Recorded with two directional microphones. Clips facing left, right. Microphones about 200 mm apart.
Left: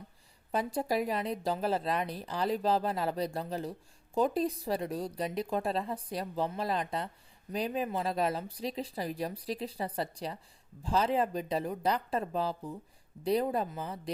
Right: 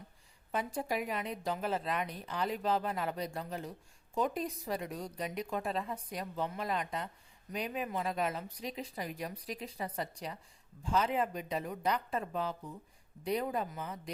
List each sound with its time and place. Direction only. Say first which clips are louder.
0.5 s a woman's voice: left 4 dB; 35° left (ahead or behind)